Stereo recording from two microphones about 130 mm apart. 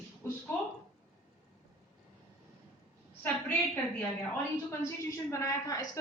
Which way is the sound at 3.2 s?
15° left (ahead or behind).